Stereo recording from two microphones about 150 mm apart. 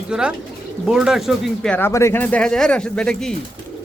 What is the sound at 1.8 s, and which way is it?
Speech, 20° left (ahead or behind).